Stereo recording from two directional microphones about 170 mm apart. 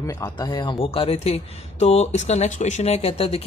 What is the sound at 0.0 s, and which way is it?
Speech, 20° left (ahead or behind).